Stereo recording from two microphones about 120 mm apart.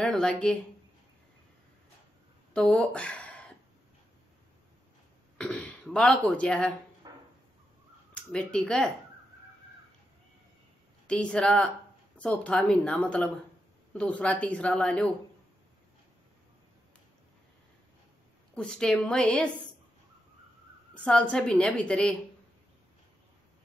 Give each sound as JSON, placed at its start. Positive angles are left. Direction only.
{"t": 0.0, "sound": "speech", "side_deg": 5}
{"t": 2.5, "sound": "speech", "side_deg": 5}
{"t": 5.4, "sound": "speech", "side_deg": 10}
{"t": 7.0, "sound": "a sound", "side_deg": -35}
{"t": 8.1, "sound": "speech", "side_deg": 10}
{"t": 11.1, "sound": "a woman's voice", "side_deg": 10}
{"t": 18.5, "sound": "a woman's voice", "side_deg": 5}
{"t": 20.9, "sound": "a woman's voice", "side_deg": 10}